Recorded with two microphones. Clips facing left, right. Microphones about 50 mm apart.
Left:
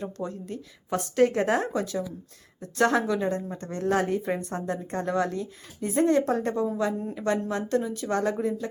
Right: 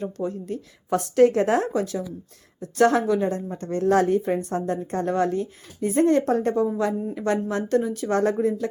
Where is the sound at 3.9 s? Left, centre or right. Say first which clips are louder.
Right 6 dB; right.